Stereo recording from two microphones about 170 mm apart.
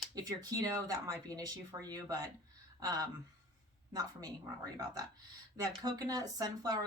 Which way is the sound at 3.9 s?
20° right (ahead or behind).